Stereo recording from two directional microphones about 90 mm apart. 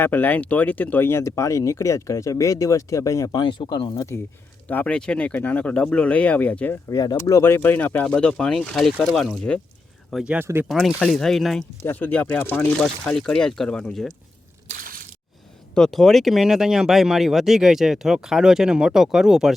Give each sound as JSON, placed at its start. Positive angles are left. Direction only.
{"t": 0.0, "sound": "speech", "side_deg": 20}
{"t": 3.7, "sound": "speech", "side_deg": 50}
{"t": 4.7, "sound": "speech", "side_deg": 15}
{"t": 6.9, "sound": "speech", "side_deg": 40}
{"t": 8.0, "sound": "speech", "side_deg": 10}
{"t": 10.2, "sound": "speech", "side_deg": -25}
{"t": 10.7, "sound": "speech", "side_deg": 0}
{"t": 11.8, "sound": "speech", "side_deg": 20}
{"t": 12.8, "sound": "speech", "side_deg": 5}
{"t": 15.7, "sound": "speech", "side_deg": 5}